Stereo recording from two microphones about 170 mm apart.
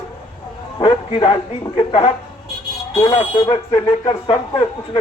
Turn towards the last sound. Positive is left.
turn(degrees=30)  # may be behind; listen again after turning